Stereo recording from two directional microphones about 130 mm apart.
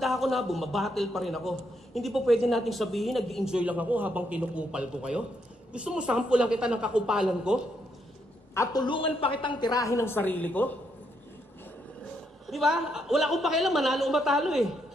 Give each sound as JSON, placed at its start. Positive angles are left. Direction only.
{"t": 0.0, "sound": "a man's voice", "side_deg": 0}
{"t": 8.8, "sound": "a woman's voice", "side_deg": 40}
{"t": 12.4, "sound": "a man's voice", "side_deg": 0}